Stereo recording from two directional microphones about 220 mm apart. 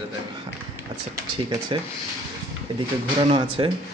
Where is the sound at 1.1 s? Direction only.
15° right (ahead or behind).